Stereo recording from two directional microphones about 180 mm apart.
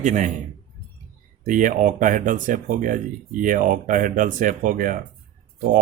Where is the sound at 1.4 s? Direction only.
45° right (ahead or behind).